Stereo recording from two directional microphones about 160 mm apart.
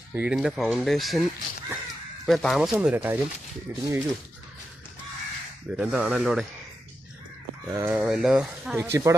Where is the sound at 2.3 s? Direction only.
Centre (ahead or behind).